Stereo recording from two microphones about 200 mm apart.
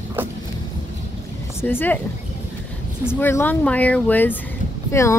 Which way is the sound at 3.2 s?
10° left (ahead or behind).